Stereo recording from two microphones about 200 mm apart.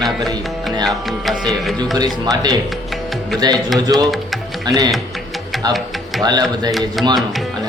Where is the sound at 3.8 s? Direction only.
20° right (ahead or behind).